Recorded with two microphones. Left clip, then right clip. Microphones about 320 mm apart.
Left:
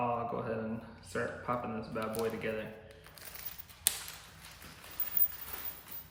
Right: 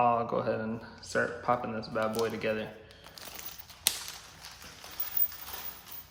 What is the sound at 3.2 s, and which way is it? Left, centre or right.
Music, centre.